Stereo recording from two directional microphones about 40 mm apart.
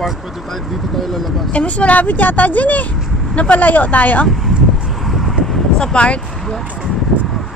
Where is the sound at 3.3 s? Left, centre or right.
Left.